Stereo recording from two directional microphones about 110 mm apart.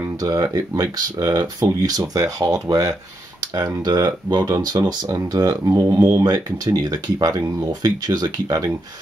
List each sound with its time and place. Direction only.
0.0 s speech: 35° right (ahead or behind)